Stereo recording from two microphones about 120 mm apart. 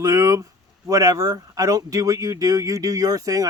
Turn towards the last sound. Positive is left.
turn(degrees=-30)  # may be behind; listen again after turning